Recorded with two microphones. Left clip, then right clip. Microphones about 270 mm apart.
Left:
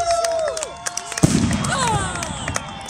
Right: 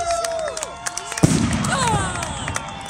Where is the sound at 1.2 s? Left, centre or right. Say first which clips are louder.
Even; centre.